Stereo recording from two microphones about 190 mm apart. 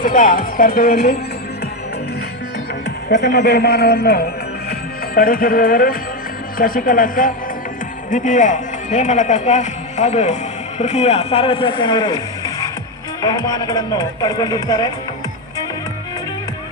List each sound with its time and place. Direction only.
0.0 s speech: 45° left (ahead or behind)
3.1 s a man's voice: 60° left (ahead or behind); by 14.9 s 20° left (ahead or behind)